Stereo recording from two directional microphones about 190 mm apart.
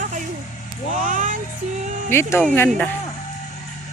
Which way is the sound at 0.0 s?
40° right (ahead or behind).